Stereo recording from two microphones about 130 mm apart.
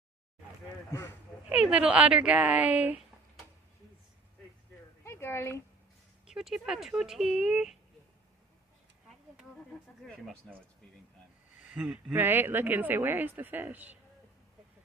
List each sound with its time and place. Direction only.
1.5 s speech: 10° right (ahead or behind)
5.0 s a sound: 20° left (ahead or behind)
6.2 s speech: 5° right (ahead or behind)
10.4 s speech: 5° left (ahead or behind)
11.6 s speech: 10° right (ahead or behind)